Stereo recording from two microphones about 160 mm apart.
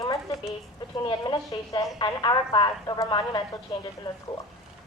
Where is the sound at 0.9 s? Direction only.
30° left (ahead or behind).